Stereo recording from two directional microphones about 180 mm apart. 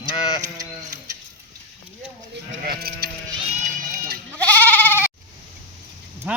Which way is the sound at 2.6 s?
60° right (ahead or behind).